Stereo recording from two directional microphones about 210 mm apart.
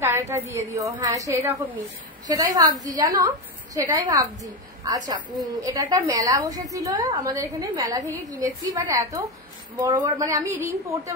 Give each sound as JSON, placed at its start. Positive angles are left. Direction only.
{"t": 0.0, "sound": "a woman's voice", "side_deg": -10}